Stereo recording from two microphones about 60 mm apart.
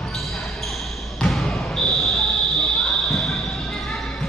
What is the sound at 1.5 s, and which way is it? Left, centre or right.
Basketball bounce, centre.